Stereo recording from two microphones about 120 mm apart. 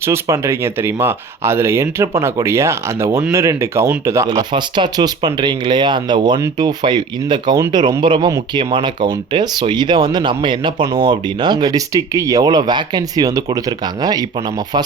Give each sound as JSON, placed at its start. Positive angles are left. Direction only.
{"t": 0.0, "sound": "speech", "side_deg": -20}
{"t": 4.3, "sound": "speech", "side_deg": -40}